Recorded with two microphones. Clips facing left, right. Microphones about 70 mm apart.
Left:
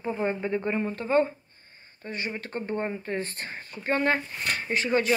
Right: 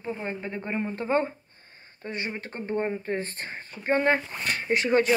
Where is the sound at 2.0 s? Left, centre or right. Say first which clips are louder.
Right 1 dB; right.